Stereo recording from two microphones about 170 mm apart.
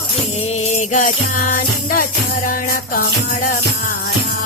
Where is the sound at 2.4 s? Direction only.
55° left (ahead or behind).